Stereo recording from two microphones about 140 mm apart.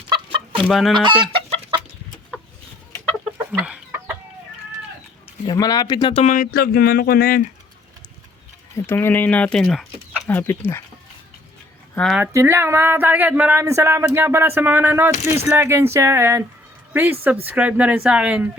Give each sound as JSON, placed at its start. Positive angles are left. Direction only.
{"t": 0.1, "sound": "chicken", "side_deg": -40}
{"t": 0.6, "sound": "chicken", "side_deg": 0}
{"t": 1.2, "sound": "chicken", "side_deg": -40}
{"t": 3.6, "sound": "chicken", "side_deg": -10}
{"t": 5.5, "sound": "speech", "side_deg": 25}
{"t": 6.1, "sound": "speech", "side_deg": 60}
{"t": 8.7, "sound": "speech", "side_deg": 15}
{"t": 12.3, "sound": "speech", "side_deg": -20}